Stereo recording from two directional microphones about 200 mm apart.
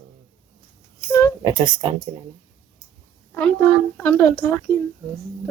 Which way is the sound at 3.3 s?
10° left (ahead or behind).